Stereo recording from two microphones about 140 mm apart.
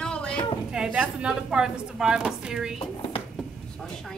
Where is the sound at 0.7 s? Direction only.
5° right (ahead or behind).